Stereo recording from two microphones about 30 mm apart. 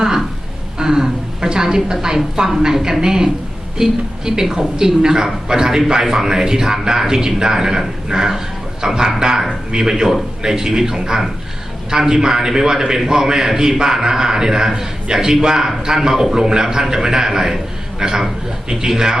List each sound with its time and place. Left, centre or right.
0.8 s a man's voice: centre